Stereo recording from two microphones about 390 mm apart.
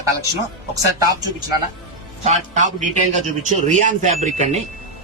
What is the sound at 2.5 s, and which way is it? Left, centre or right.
A man's voice, centre.